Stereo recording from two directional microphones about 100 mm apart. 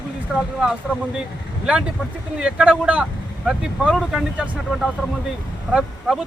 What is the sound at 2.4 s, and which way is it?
Speech, 10° right (ahead or behind).